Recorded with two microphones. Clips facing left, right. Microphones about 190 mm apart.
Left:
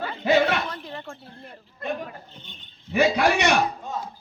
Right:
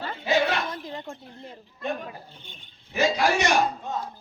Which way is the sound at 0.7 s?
15° right (ahead or behind).